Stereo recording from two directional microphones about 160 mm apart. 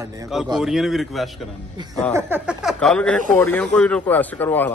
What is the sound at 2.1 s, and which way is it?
Speech, 15° right (ahead or behind).